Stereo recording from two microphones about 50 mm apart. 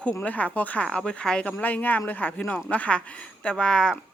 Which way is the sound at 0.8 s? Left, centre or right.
Centre.